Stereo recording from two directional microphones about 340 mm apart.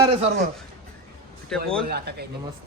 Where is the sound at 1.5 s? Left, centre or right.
Centre.